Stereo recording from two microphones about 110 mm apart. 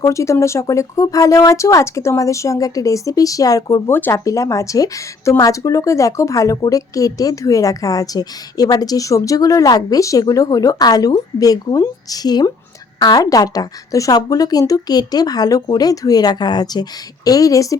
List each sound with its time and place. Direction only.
0.0 s speech: 30° left (ahead or behind)
3.9 s speech: 20° left (ahead or behind)